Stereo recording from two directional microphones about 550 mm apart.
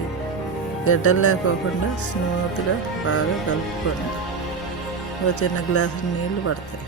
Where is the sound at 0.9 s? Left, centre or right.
Left.